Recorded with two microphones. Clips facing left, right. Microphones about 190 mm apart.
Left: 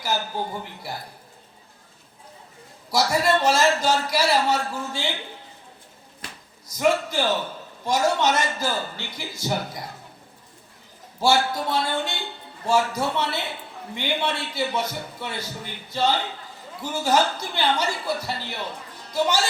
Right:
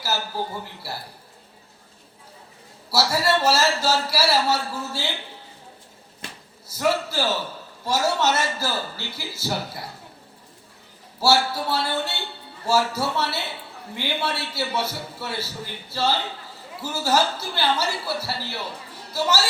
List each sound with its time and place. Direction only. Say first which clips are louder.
0.0 s a man's voice: left 1 dB; 5° right (ahead or behind)
2.9 s a man's voice: left 1 dB; 5° right (ahead or behind)
6.7 s a man's voice: left 2 dB; 5° right (ahead or behind)
11.2 s a man's voice: even; 5° right (ahead or behind)